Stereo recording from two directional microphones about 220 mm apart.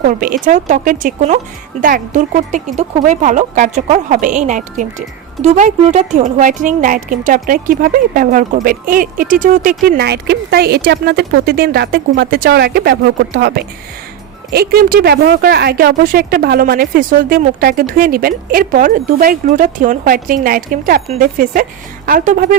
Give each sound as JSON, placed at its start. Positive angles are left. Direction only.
{"t": 0.0, "sound": "speech", "side_deg": -40}